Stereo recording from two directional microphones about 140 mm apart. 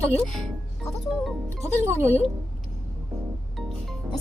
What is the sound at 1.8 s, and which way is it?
Speech, 20° right (ahead or behind).